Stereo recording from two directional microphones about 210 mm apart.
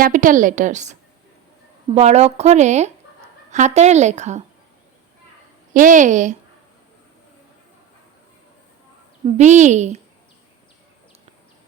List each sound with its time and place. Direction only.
0.0 s a woman's voice: 40° right (ahead or behind)
2.0 s a woman's voice: 30° right (ahead or behind)
5.7 s a woman's voice: 40° right (ahead or behind)
9.2 s a woman's voice: 35° right (ahead or behind)